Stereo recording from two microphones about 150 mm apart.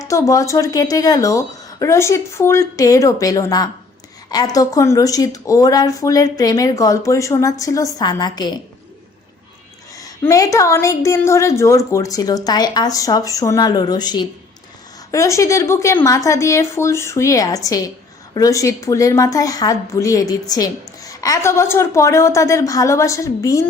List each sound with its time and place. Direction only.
0.0 s a woman's voice: 20° left (ahead or behind)
9.9 s a woman's voice: 20° left (ahead or behind)